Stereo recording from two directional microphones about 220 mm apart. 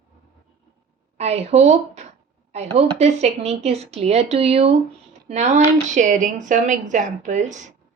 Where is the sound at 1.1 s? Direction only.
30° right (ahead or behind).